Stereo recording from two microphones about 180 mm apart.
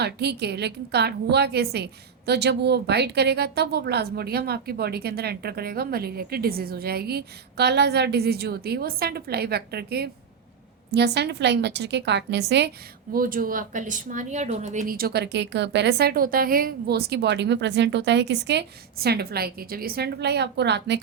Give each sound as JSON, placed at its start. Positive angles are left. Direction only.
{"t": 0.0, "sound": "a woman's voice", "side_deg": -65}
{"t": 13.1, "sound": "a woman's voice", "side_deg": -50}